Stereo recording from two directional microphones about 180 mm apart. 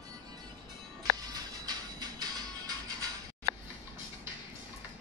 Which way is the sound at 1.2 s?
20° right (ahead or behind).